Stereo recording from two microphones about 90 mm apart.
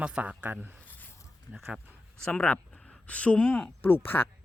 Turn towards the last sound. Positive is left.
turn(degrees=25)  # may be behind; listen again after turning